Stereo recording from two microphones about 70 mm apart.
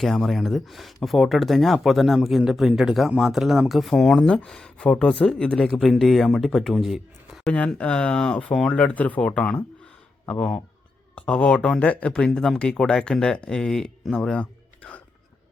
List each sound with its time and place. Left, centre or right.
0.0 s speech: centre
7.8 s speech: centre
11.1 s speech: centre